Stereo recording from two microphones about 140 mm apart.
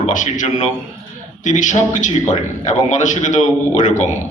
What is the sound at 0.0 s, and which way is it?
A man's voice, 65° left (ahead or behind).